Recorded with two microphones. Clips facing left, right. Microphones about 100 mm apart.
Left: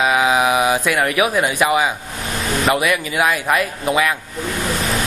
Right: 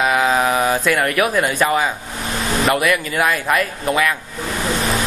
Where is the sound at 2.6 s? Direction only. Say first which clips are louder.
Even; centre (ahead or behind).